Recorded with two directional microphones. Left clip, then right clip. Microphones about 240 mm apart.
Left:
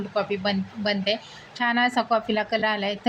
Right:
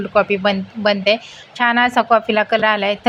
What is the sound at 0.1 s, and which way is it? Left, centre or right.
A woman's voice, centre.